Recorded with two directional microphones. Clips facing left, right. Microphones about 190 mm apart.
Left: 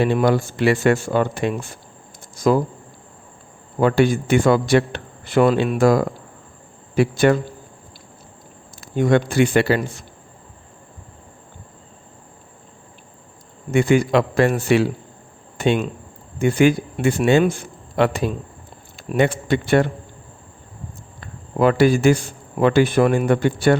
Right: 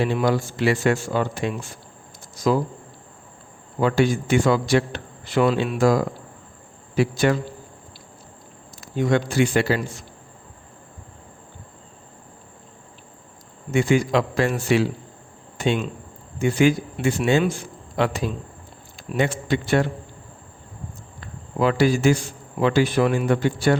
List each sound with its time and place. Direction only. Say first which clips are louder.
0.0 s a man's voice: left 4 dB; 55° left (ahead or behind)
3.8 s a man's voice: left 3 dB; 55° left (ahead or behind)
9.0 s a man's voice: left 3 dB; 55° left (ahead or behind)
13.7 s a man's voice: left 3 dB; 55° left (ahead or behind)
21.2 s a man's voice: left 4 dB; 55° left (ahead or behind)